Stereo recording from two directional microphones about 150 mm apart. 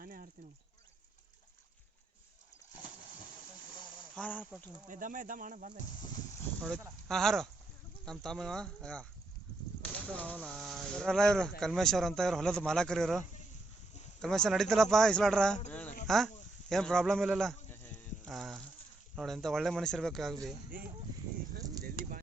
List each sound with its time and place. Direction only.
0.0 s a sound: 70° right (ahead or behind)
4.1 s speech: 10° left (ahead or behind)
4.9 s speech: 60° right (ahead or behind)
6.6 s speech: 5° left (ahead or behind)
10.1 s speech: 10° left (ahead or behind)
15.7 s a sound: 10° left (ahead or behind)
16.0 s speech: centre (ahead or behind)
18.3 s insect: centre (ahead or behind)
19.1 s speech: centre (ahead or behind)
21.8 s a sound: 75° right (ahead or behind)